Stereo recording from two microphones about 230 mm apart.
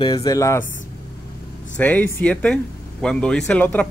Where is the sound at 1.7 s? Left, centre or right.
Centre.